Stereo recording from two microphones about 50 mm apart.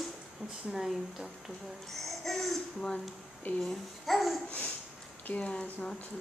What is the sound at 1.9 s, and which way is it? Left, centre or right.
Speech, centre.